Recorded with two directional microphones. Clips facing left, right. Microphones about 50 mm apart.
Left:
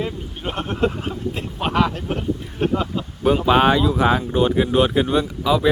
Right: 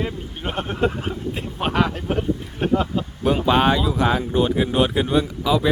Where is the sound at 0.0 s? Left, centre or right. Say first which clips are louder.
Left 1 dB; centre.